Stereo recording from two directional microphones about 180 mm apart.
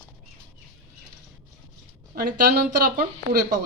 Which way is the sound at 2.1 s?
55° right (ahead or behind).